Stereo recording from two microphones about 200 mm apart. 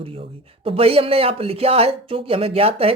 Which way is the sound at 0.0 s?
25° right (ahead or behind).